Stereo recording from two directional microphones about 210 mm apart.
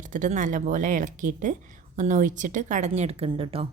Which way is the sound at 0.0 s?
35° right (ahead or behind).